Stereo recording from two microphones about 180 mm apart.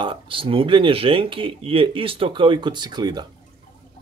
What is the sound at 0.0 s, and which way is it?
Speech, 30° right (ahead or behind).